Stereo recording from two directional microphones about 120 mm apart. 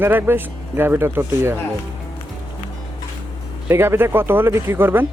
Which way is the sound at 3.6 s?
20° right (ahead or behind).